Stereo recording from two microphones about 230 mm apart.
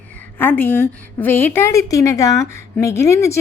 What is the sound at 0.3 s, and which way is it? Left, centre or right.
A woman's voice, centre.